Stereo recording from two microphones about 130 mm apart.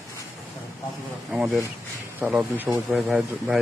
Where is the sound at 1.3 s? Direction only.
5° right (ahead or behind).